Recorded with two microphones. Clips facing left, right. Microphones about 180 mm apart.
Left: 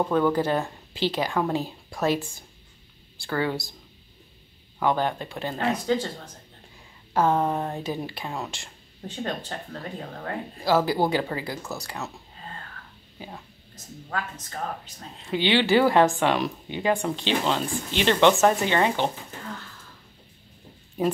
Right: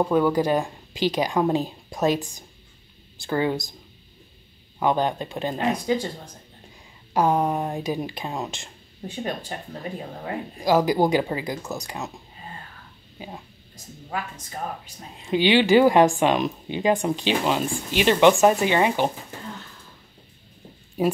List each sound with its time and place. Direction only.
0.0 s speech: 10° right (ahead or behind)
4.7 s speech: 20° right (ahead or behind)
7.2 s speech: 15° right (ahead or behind)
13.2 s speech: 15° right (ahead or behind)
21.0 s speech: 10° right (ahead or behind)